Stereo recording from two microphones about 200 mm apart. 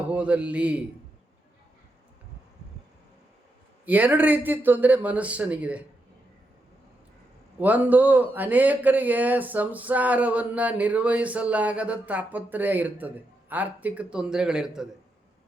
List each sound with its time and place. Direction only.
0.1 s speech: 5° right (ahead or behind)
3.8 s speech: 10° right (ahead or behind)
7.6 s a man's voice: 10° right (ahead or behind)